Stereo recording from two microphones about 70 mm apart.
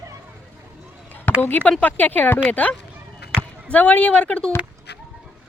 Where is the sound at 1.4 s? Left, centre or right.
Left.